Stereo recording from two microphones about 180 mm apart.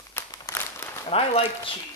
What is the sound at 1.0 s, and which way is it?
Speech, 30° left (ahead or behind).